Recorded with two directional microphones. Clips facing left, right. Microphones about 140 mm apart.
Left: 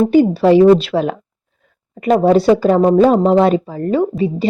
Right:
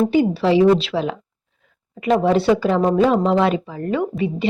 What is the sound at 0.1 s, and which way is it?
A woman's voice, 45° left (ahead or behind).